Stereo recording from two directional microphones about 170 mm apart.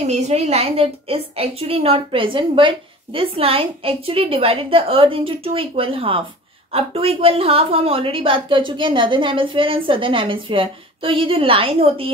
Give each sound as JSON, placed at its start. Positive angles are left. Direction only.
{"t": 0.0, "sound": "a woman's voice", "side_deg": -40}